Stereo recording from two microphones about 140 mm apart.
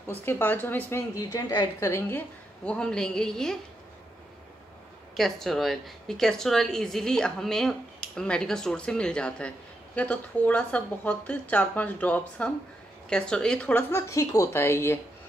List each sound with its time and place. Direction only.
0.1 s speech: 15° left (ahead or behind)
1.9 s a woman's voice: 15° left (ahead or behind)
5.1 s a woman's voice: centre (ahead or behind); by 15.0 s 20° left (ahead or behind)